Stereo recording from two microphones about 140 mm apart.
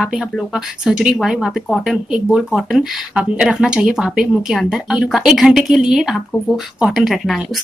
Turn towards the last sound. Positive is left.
turn(degrees=0)  # may be behind; listen again after turning